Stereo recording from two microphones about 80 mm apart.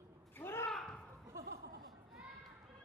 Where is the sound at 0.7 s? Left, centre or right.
Centre.